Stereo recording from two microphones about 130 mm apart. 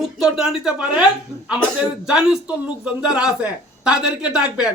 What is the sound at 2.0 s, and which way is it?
A man's voice, 5° right (ahead or behind).